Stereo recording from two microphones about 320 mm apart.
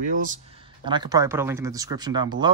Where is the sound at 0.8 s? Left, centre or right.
Centre.